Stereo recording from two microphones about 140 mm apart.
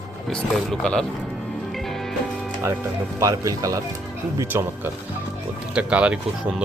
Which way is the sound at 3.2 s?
25° right (ahead or behind).